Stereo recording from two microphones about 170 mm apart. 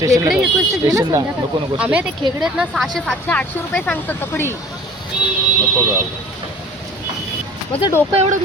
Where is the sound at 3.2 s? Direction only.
10° left (ahead or behind).